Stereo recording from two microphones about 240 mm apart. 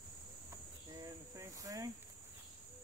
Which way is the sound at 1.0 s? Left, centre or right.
Centre.